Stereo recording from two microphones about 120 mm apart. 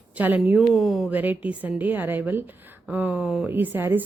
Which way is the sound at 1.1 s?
15° right (ahead or behind).